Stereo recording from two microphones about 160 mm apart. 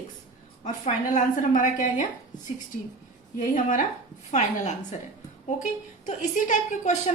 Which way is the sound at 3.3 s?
55° left (ahead or behind).